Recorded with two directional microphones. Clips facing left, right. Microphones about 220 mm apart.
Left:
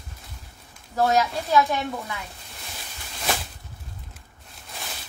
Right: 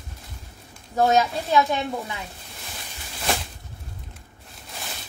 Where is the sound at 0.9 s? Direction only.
20° right (ahead or behind).